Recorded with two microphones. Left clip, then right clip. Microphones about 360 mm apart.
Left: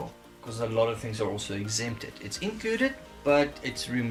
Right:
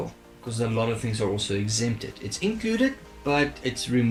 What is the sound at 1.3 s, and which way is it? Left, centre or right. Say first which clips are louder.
Speech: right 5 dB; centre.